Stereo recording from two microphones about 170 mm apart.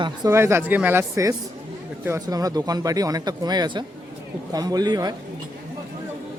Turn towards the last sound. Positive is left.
turn(degrees=-25)  # may be behind; listen again after turning